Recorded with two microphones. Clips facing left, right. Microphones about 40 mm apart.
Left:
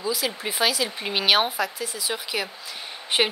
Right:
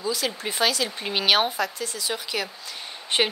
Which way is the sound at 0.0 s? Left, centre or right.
Centre.